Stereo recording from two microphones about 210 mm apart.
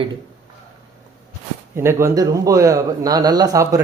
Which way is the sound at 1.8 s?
10° right (ahead or behind).